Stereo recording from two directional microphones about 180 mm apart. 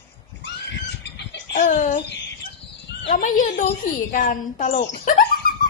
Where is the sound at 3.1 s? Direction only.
50° left (ahead or behind).